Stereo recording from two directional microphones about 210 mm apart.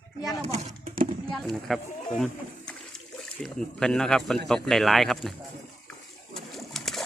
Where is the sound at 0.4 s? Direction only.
30° right (ahead or behind).